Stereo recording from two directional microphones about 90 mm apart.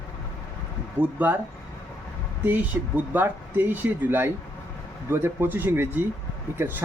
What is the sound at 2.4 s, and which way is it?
Speech, 20° right (ahead or behind).